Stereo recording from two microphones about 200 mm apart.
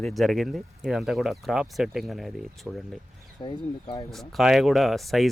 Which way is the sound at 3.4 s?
20° left (ahead or behind).